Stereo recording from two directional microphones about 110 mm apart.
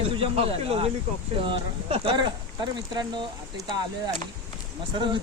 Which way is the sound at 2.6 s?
40° right (ahead or behind).